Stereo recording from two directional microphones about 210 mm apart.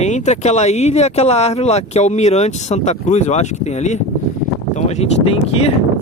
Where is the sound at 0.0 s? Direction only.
35° left (ahead or behind).